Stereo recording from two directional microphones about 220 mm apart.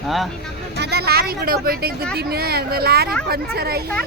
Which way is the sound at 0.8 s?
45° right (ahead or behind).